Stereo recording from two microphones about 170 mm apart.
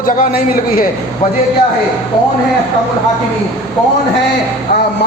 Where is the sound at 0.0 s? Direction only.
55° left (ahead or behind).